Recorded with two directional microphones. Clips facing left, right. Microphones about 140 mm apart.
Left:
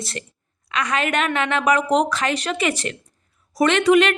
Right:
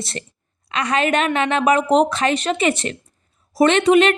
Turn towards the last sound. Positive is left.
turn(degrees=-25)  # may be behind; listen again after turning